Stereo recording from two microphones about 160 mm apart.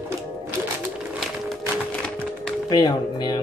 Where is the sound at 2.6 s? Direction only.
25° left (ahead or behind).